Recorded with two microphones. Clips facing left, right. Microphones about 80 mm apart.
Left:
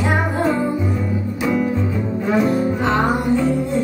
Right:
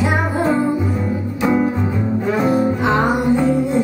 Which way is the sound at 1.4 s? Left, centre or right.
Right.